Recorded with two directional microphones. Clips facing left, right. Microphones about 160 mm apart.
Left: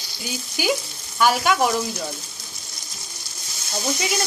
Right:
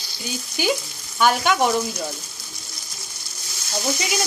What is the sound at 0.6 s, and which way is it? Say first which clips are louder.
Speech: even; 5° left (ahead or behind).